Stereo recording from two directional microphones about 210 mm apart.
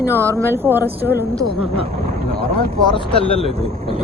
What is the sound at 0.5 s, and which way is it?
Speech, 10° right (ahead or behind).